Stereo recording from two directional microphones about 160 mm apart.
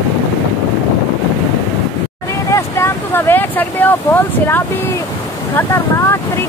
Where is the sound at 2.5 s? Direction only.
15° left (ahead or behind).